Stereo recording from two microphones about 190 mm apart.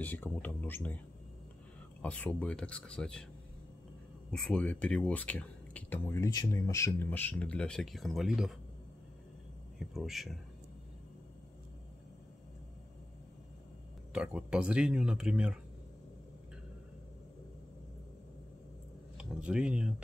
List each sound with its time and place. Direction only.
0.0 s speech: 10° left (ahead or behind)
4.3 s speech: 5° left (ahead or behind)
9.8 s speech: centre (ahead or behind)
14.1 s speech: 5° right (ahead or behind)
19.1 s speech: 5° right (ahead or behind)